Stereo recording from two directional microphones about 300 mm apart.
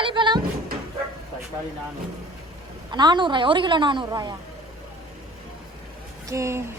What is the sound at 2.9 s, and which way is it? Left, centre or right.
Speech, centre.